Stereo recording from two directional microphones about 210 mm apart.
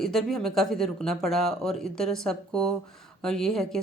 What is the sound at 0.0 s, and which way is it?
Speech, centre (ahead or behind).